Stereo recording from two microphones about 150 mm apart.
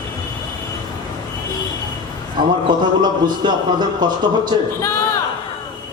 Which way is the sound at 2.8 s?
30° right (ahead or behind).